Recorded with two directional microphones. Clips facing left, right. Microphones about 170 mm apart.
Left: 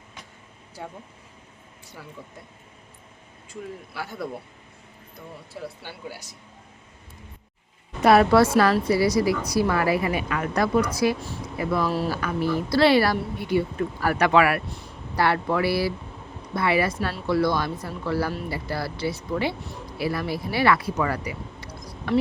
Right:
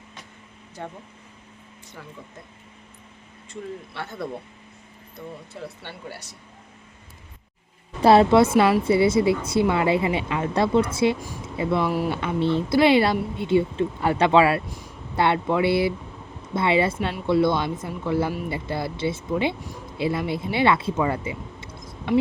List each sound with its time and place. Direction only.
0.8 s speech: 10° left (ahead or behind)
3.9 s speech: 5° left (ahead or behind)
5.5 s speech: 5° left (ahead or behind)
8.0 s speech: 25° right (ahead or behind)